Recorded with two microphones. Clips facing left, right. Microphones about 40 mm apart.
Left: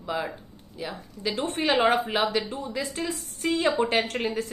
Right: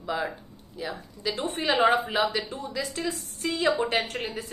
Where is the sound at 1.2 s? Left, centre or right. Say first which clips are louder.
Left 1 dB; left.